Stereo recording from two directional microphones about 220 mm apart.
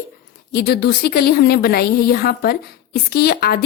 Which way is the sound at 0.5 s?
45° left (ahead or behind).